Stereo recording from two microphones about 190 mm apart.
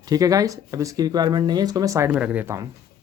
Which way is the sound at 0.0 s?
20° right (ahead or behind).